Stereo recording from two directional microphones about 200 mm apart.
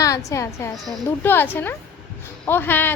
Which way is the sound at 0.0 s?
15° left (ahead or behind).